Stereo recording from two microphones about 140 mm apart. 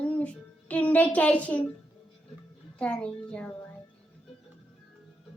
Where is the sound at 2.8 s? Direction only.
10° left (ahead or behind).